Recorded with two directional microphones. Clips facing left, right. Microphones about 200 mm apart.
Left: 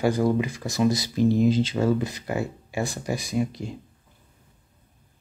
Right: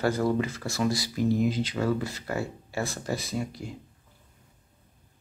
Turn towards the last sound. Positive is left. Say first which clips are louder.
# left 6 dB
turn(degrees=20)  # may be behind; listen again after turning